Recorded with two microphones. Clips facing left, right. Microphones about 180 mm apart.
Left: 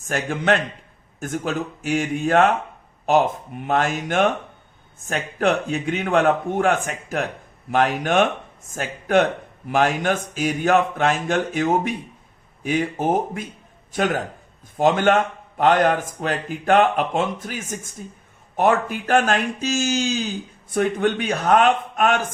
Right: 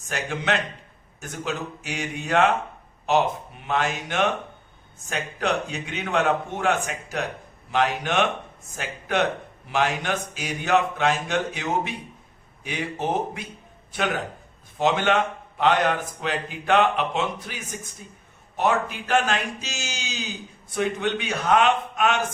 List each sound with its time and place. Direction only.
0.1 s a man's voice: 50° left (ahead or behind)
3.7 s a man's voice: 50° left (ahead or behind)